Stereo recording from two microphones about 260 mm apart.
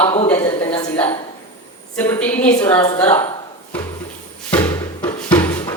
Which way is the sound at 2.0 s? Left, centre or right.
Centre.